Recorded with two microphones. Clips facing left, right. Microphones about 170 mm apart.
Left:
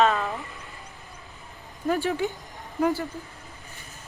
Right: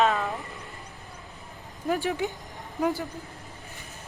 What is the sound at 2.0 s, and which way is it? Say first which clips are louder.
Speech: left 2 dB; 15° right (ahead or behind).